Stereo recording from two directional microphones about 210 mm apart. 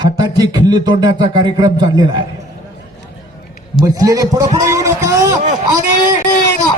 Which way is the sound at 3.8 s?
15° right (ahead or behind).